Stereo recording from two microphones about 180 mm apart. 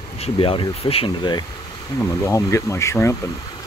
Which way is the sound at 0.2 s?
30° left (ahead or behind).